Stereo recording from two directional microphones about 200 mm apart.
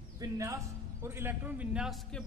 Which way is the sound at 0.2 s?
15° right (ahead or behind).